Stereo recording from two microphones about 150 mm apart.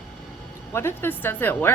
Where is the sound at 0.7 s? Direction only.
15° left (ahead or behind).